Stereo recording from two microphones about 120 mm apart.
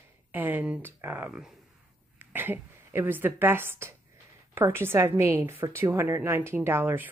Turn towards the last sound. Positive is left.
turn(degrees=-15)  # may be behind; listen again after turning